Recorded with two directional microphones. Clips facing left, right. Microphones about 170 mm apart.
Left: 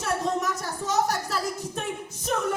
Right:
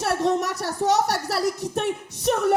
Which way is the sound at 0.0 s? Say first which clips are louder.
Right 4 dB; 70° right (ahead or behind).